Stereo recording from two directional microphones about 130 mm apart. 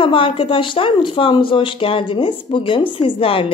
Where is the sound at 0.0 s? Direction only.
40° left (ahead or behind).